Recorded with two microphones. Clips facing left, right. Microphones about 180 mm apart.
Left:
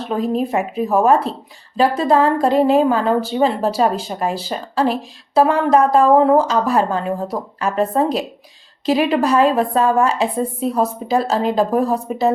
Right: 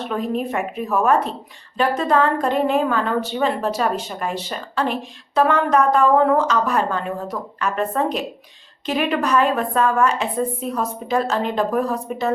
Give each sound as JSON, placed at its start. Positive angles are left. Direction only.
{"t": 0.1, "sound": "a woman's voice", "side_deg": 30}